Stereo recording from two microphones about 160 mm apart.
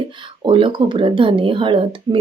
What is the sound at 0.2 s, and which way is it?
Speech, 30° right (ahead or behind).